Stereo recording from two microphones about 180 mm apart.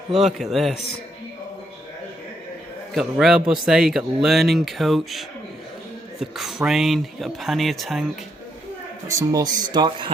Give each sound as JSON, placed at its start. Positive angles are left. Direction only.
{"t": 0.3, "sound": "speech", "side_deg": 0}
{"t": 2.9, "sound": "speech", "side_deg": 0}
{"t": 9.0, "sound": "speech", "side_deg": -20}